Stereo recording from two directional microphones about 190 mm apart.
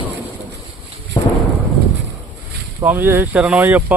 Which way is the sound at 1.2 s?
25° left (ahead or behind).